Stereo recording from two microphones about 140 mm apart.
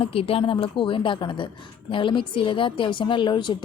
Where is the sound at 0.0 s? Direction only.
40° left (ahead or behind).